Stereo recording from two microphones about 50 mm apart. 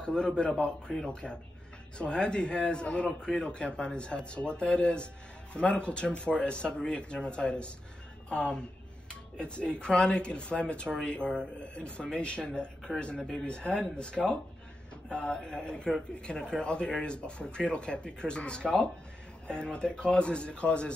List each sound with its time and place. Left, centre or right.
0.0 s a man's voice: centre